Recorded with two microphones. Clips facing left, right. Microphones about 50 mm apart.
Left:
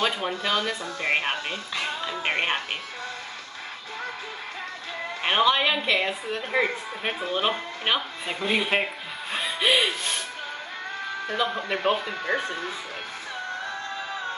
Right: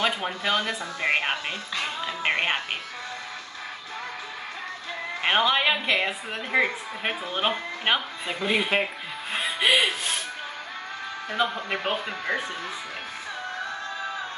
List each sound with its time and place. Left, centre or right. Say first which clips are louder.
0.4 s speech: right 2 dB; right
1.8 s speech: even; centre
5.2 s a woman's voice: even; centre
8.3 s speech: even; centre
9.3 s music: right 1 dB; centre
9.7 s speech: right 1 dB; right
11.7 s a woman's voice: left 3 dB; centre